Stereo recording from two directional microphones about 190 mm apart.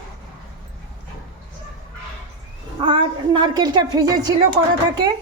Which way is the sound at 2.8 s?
25° right (ahead or behind).